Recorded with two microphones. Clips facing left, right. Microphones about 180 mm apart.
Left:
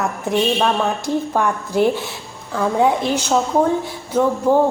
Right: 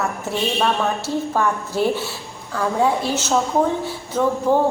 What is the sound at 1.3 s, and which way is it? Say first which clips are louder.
Speech: left 3 dB; 15° left (ahead or behind).